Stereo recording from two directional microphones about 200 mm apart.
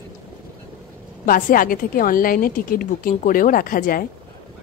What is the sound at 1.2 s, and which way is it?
A woman's voice, 45° left (ahead or behind).